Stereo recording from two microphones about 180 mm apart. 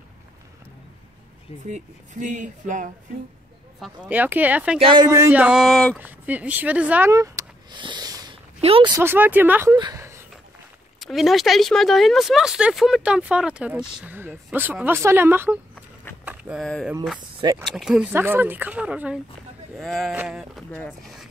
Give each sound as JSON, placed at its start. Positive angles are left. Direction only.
{"t": 1.7, "sound": "speech", "side_deg": -45}
{"t": 3.8, "sound": "speech", "side_deg": -10}
{"t": 4.7, "sound": "a man's voice", "side_deg": -30}
{"t": 5.0, "sound": "speech", "side_deg": -15}
{"t": 5.9, "sound": "speech", "side_deg": -10}
{"t": 8.5, "sound": "speech", "side_deg": -30}
{"t": 8.9, "sound": "speech", "side_deg": -10}
{"t": 9.8, "sound": "a sound", "side_deg": -20}
{"t": 11.0, "sound": "speech", "side_deg": 0}
{"t": 16.3, "sound": "a sound", "side_deg": -5}
{"t": 16.6, "sound": "speech", "side_deg": 5}
{"t": 17.2, "sound": "speech", "side_deg": -25}
{"t": 17.6, "sound": "speech", "side_deg": 0}